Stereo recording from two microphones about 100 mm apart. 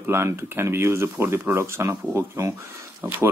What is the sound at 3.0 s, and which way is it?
Speech, 20° right (ahead or behind).